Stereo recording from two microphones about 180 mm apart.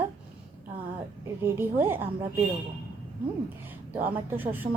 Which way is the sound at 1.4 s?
10° right (ahead or behind).